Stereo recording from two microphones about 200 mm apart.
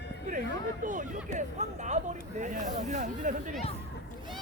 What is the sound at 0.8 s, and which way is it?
Speech, 40° right (ahead or behind).